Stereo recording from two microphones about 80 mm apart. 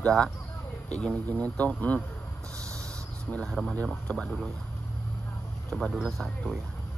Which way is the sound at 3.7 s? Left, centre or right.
Centre.